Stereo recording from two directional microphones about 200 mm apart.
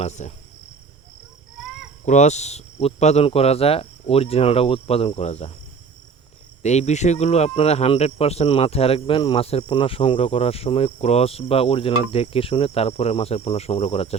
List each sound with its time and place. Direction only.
0.0 s speech: 35° left (ahead or behind)
2.0 s speech: 35° left (ahead or behind)
6.6 s speech: 35° left (ahead or behind)